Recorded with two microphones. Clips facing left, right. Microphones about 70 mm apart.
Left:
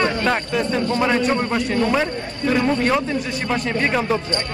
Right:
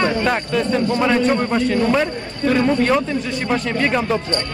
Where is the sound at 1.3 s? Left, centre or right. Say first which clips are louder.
Right 3 dB; centre.